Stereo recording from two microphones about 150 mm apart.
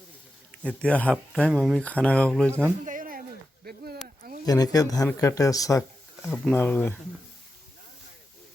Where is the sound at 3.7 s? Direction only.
90° right.